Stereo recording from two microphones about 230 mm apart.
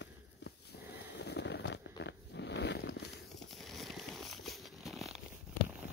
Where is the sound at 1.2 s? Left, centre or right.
Left.